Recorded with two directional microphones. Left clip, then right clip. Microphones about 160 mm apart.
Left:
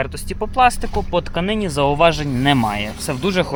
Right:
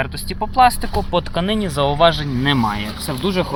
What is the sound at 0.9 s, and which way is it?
Speech, centre (ahead or behind).